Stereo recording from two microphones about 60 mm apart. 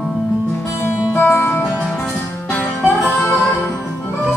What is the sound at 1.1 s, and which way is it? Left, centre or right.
Music, left.